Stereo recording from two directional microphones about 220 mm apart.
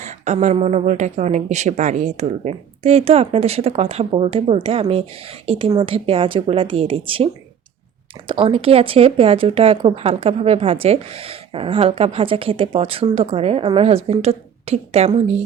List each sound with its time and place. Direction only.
0.0 s speech: 35° right (ahead or behind)
8.3 s speech: 25° right (ahead or behind)